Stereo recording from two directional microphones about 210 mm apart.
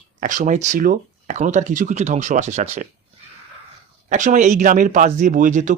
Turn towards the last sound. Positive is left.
turn(degrees=-35)  # may be behind; listen again after turning